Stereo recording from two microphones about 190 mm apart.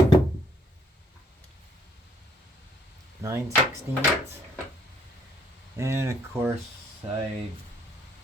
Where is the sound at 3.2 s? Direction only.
15° right (ahead or behind).